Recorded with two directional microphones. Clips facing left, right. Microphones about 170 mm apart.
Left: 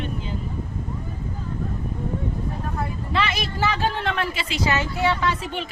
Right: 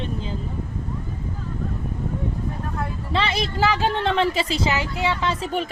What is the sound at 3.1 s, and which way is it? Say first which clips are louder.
Speech: right 2 dB; 30° right (ahead or behind).